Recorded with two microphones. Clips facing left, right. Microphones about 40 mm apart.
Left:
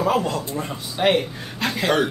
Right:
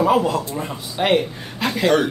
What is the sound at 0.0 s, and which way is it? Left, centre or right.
A man's voice, centre.